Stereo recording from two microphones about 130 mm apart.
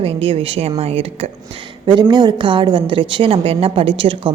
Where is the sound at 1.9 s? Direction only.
35° right (ahead or behind).